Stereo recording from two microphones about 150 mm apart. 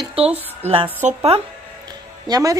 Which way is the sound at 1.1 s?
40° right (ahead or behind).